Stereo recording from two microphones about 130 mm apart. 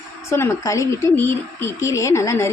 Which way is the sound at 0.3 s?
20° left (ahead or behind).